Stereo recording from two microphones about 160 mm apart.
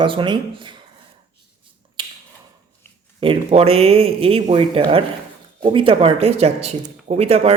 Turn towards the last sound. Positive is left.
turn(degrees=-40)  # may be behind; listen again after turning